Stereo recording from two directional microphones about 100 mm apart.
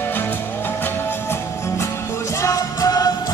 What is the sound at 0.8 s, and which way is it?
Music, 25° left (ahead or behind).